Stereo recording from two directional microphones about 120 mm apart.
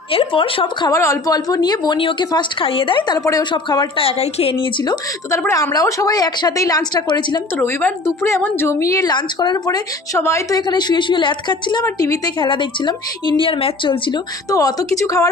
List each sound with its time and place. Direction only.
0.1 s speech: 45° left (ahead or behind)
0.8 s a woman's voice: 30° left (ahead or behind)
3.9 s speech: 55° left (ahead or behind)
5.5 s a woman's voice: 30° left (ahead or behind)
7.5 s a woman's voice: 20° left (ahead or behind)
10.7 s a woman's voice: 40° left (ahead or behind)
11.8 s a woman's voice: 30° left (ahead or behind)
12.4 s a woman's voice: 40° left (ahead or behind)
14.5 s a woman's voice: 30° left (ahead or behind)